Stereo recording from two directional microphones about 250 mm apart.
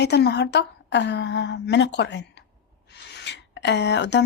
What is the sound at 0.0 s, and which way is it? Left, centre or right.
Speech, left.